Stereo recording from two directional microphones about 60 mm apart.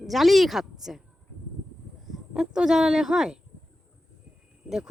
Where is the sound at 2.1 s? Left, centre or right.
Centre.